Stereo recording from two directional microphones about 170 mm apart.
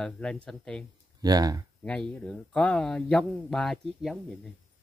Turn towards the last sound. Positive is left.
turn(degrees=0)  # may be behind; listen again after turning